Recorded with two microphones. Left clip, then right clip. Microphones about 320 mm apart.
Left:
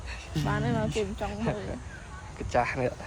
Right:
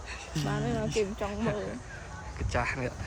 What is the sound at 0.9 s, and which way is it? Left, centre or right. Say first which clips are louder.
Speech: right 1 dB; centre.